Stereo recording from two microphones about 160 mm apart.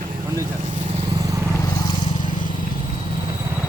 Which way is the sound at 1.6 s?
30° left (ahead or behind).